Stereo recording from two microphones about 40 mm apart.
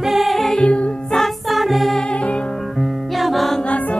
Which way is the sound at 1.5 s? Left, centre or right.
Centre.